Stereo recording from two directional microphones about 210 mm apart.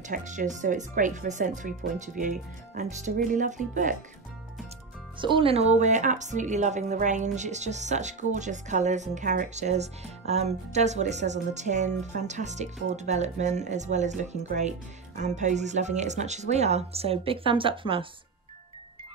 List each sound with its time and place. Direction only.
0.1 s a woman's voice: 35° right (ahead or behind)
5.2 s a woman's voice: 25° right (ahead or behind)